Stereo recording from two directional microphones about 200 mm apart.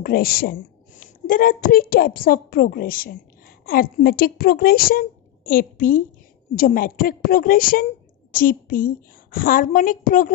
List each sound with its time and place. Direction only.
0.0 s a woman's voice: 50° left (ahead or behind)